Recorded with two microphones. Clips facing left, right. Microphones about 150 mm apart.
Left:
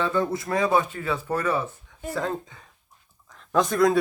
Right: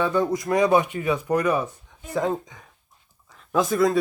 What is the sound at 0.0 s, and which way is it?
Speech, 15° right (ahead or behind).